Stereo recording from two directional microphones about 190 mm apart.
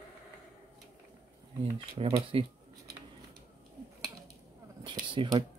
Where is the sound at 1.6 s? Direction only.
30° right (ahead or behind).